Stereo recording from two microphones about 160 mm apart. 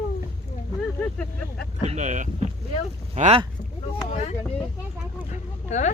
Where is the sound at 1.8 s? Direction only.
45° right (ahead or behind).